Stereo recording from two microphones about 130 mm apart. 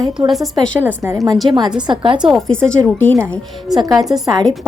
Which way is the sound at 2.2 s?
Centre (ahead or behind).